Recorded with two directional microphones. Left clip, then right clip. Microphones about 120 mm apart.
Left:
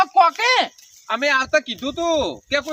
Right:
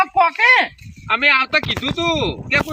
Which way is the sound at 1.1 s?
90° left.